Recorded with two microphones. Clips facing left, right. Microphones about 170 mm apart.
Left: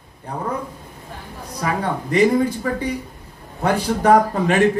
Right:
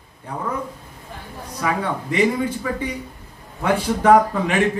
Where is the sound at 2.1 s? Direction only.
40° left (ahead or behind).